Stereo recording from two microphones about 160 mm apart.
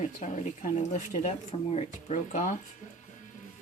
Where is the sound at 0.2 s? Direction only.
50° left (ahead or behind).